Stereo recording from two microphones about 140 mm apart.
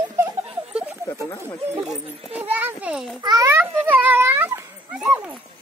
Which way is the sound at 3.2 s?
30° right (ahead or behind).